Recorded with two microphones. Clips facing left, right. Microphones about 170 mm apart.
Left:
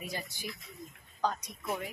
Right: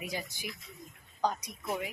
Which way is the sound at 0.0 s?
15° right (ahead or behind).